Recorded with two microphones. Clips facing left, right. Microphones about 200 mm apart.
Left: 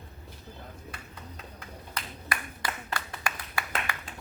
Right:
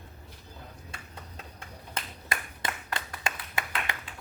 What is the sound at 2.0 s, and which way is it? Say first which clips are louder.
Clapping: even; 25° right (ahead or behind).